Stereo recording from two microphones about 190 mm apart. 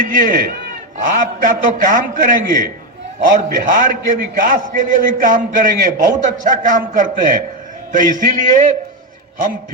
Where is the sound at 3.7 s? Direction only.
50° right (ahead or behind).